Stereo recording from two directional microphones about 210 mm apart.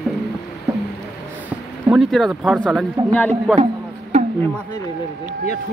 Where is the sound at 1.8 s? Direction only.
Centre (ahead or behind).